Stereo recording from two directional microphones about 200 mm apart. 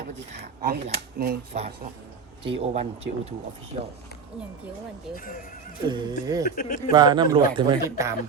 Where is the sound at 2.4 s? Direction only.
30° right (ahead or behind).